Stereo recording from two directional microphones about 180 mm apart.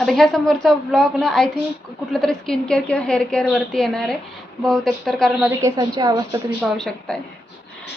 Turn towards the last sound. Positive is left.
turn(degrees=5)  # may be behind; listen again after turning